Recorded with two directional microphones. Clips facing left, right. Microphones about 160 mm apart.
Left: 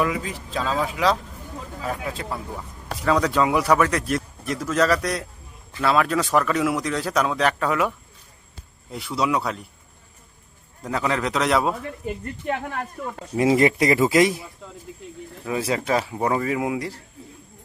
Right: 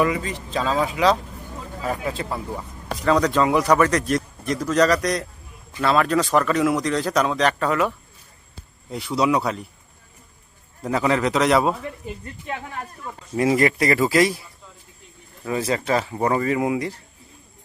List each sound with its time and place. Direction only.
0.0 s speech: centre (ahead or behind)
10.8 s speech: centre (ahead or behind)
12.0 s speech: 60° left (ahead or behind)
13.3 s speech: 20° left (ahead or behind)
15.4 s speech: 5° left (ahead or behind)